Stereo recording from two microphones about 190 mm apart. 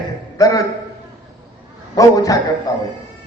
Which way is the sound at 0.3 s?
20° left (ahead or behind).